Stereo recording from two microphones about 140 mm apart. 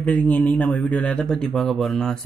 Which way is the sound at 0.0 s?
10° left (ahead or behind).